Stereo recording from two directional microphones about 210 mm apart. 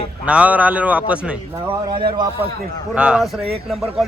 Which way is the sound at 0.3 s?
5° right (ahead or behind).